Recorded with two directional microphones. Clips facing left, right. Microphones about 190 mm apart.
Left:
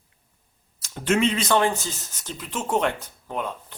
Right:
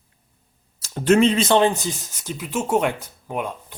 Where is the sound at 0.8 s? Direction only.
35° right (ahead or behind).